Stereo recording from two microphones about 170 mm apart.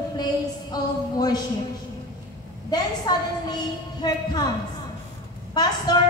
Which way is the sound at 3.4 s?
25° left (ahead or behind).